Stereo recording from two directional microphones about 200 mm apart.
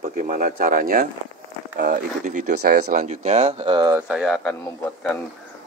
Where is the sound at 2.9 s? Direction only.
35° right (ahead or behind).